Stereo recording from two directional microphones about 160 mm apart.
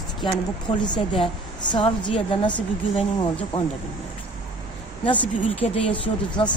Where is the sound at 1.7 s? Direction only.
30° left (ahead or behind).